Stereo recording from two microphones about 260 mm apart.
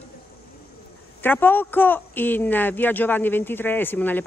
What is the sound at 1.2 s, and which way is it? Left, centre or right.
A man's voice, centre.